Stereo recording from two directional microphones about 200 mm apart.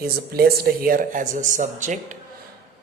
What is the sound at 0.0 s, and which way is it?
Speech, 50° right (ahead or behind).